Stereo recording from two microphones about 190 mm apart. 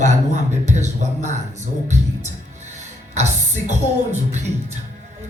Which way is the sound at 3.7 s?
35° right (ahead or behind).